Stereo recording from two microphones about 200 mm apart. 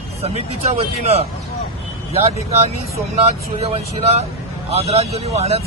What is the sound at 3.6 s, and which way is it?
Speech, 30° right (ahead or behind).